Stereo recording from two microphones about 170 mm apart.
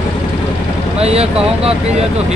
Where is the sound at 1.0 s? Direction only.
35° right (ahead or behind).